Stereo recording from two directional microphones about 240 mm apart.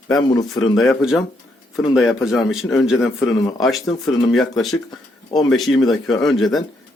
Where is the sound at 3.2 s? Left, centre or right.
Centre.